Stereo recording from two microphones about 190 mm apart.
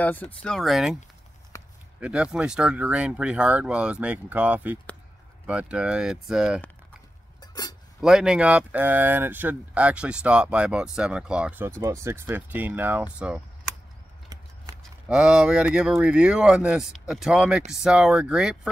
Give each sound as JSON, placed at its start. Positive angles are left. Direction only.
{"t": 0.4, "sound": "speech", "side_deg": 5}
{"t": 1.5, "sound": "a sound", "side_deg": 15}
{"t": 2.0, "sound": "speech", "side_deg": -5}
{"t": 8.0, "sound": "speech", "side_deg": -5}
{"t": 14.8, "sound": "speech", "side_deg": -5}